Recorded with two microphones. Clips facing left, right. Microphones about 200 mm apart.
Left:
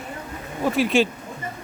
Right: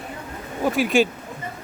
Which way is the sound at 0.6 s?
Centre (ahead or behind).